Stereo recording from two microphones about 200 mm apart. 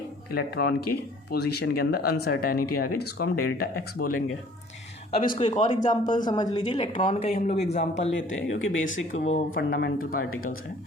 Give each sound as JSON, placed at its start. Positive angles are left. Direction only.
{"t": 0.5, "sound": "speech", "side_deg": 55}
{"t": 5.2, "sound": "speech", "side_deg": 40}
{"t": 6.1, "sound": "speech", "side_deg": 20}
{"t": 8.1, "sound": "speech", "side_deg": 75}
{"t": 9.6, "sound": "speech", "side_deg": 50}